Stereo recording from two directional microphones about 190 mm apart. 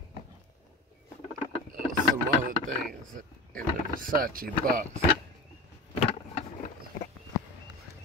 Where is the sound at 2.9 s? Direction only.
45° right (ahead or behind).